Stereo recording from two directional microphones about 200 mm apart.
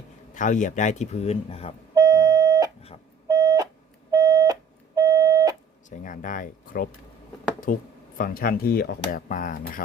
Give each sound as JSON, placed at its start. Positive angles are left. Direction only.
{"t": 0.3, "sound": "speech", "side_deg": 40}
{"t": 2.0, "sound": "a sound", "side_deg": -15}
{"t": 3.2, "sound": "beep", "side_deg": -15}
{"t": 6.0, "sound": "speech", "side_deg": 40}